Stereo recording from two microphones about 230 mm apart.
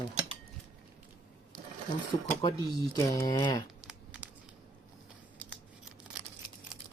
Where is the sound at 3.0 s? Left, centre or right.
Centre.